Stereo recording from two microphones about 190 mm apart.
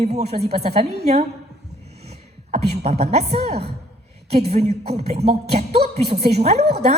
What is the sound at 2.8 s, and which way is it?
Music, 35° right (ahead or behind).